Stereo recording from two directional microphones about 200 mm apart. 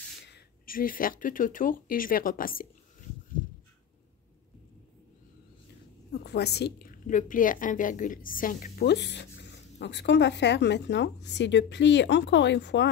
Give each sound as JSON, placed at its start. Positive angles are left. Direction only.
{"t": 0.3, "sound": "speech", "side_deg": 45}
{"t": 6.1, "sound": "a woman's voice", "side_deg": 55}